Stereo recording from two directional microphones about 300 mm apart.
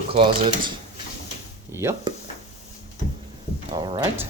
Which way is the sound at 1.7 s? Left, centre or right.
Centre.